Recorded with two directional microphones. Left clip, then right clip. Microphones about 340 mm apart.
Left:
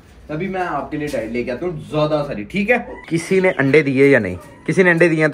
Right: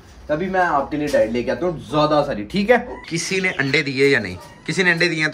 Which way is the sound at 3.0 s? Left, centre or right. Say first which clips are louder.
Left 5 dB; centre.